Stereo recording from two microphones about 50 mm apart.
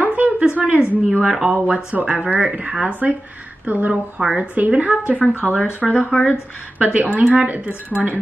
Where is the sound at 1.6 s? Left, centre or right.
Right.